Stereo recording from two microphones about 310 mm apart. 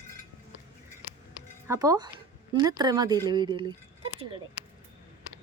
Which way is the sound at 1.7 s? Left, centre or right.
Centre.